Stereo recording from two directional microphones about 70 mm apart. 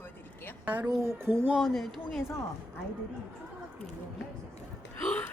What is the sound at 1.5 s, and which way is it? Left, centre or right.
Speech, centre.